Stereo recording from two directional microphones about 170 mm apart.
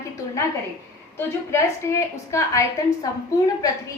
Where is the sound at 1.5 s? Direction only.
15° left (ahead or behind).